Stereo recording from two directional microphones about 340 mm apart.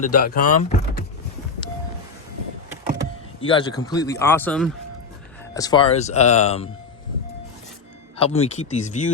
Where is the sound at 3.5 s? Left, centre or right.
Centre.